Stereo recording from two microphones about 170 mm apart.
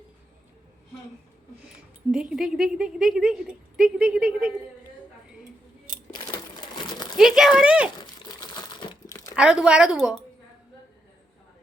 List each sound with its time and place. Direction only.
2.3 s a woman's voice: centre (ahead or behind)
6.6 s a sound: 25° left (ahead or behind)
7.2 s a woman's voice: 5° right (ahead or behind)
7.9 s crumpling: 25° left (ahead or behind)
9.3 s a woman's voice: 5° right (ahead or behind)